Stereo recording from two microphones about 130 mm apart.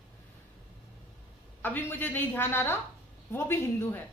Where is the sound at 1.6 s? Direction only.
15° left (ahead or behind).